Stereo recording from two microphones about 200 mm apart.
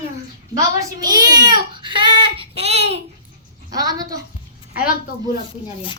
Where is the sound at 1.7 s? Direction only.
25° right (ahead or behind).